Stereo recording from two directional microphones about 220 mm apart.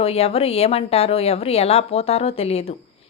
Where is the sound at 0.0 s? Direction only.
25° left (ahead or behind).